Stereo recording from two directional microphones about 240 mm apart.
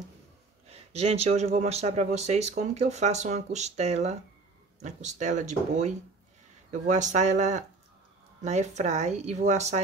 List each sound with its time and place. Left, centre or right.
0.7 s speech: right